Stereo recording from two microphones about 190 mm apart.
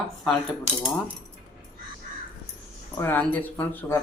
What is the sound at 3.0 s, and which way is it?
Speech, 10° left (ahead or behind).